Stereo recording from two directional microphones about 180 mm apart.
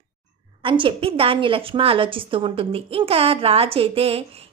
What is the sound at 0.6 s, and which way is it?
A woman's voice, 30° right (ahead or behind).